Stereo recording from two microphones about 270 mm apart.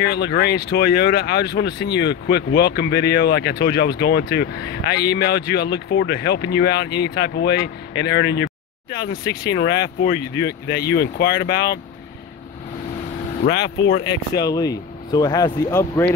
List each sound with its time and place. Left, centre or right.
0.0 s speech: left
13.4 s speech: left
14.3 s speech: centre